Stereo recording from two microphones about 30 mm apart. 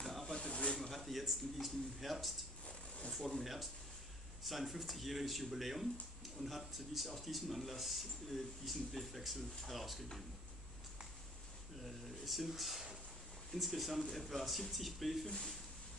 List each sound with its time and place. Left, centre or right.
0.0 s snake: centre
0.3 s snake: left
0.7 s a sound: centre
3.3 s speech: centre
4.4 s a man's voice: centre
11.8 s a man's voice: centre